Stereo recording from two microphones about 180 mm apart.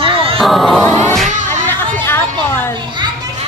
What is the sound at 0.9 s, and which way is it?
Music, 15° left (ahead or behind).